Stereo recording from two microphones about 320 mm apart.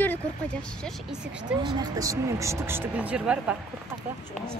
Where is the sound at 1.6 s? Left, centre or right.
Centre.